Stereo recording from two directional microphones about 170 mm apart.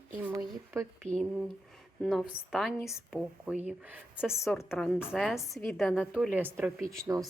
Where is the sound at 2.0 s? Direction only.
5° right (ahead or behind).